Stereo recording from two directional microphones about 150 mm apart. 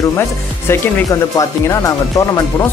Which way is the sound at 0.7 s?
20° left (ahead or behind).